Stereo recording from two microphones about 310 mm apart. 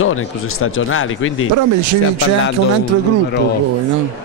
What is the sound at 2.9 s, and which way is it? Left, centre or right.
Speech, right.